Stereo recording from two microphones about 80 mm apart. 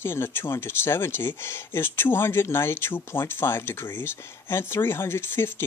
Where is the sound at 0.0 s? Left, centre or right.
Left.